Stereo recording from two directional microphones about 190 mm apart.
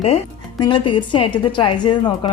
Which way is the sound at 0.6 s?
25° left (ahead or behind).